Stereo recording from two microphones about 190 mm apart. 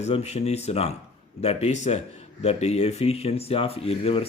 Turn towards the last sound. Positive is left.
turn(degrees=30)  # may be behind; listen again after turning